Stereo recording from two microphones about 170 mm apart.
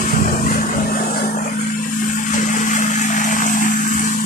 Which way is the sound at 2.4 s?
50° left (ahead or behind).